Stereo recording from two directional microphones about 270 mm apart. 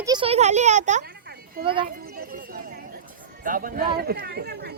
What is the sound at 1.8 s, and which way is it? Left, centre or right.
Children playing, right.